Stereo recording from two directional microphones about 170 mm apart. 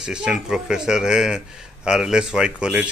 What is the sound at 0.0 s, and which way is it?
A man's voice, 5° right (ahead or behind).